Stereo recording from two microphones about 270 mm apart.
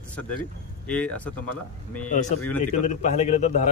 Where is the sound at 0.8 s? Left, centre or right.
Centre.